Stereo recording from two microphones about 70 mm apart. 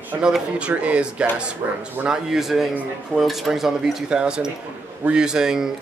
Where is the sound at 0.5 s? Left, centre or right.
Centre.